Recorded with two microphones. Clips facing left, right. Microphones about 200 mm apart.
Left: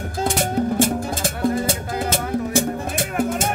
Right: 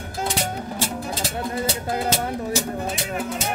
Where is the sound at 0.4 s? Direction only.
50° left (ahead or behind).